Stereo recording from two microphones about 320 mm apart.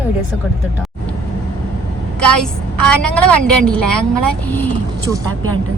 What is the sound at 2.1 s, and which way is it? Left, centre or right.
Vehicle, right.